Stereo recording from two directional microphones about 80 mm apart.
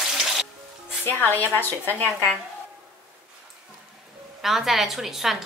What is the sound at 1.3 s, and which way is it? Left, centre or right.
Speech, left.